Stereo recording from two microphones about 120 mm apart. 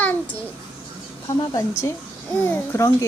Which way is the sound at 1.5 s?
25° left (ahead or behind).